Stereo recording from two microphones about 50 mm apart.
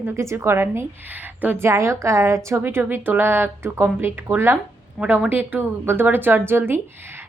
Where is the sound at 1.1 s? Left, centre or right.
Right.